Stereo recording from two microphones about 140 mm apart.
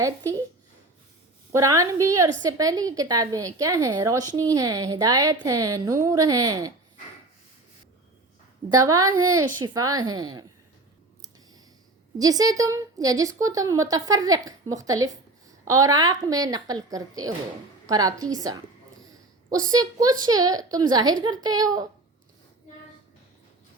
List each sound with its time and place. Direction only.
1.5 s a woman's voice: 25° right (ahead or behind)
8.8 s a woman's voice: 25° right (ahead or behind)
12.2 s a woman's voice: 25° right (ahead or behind)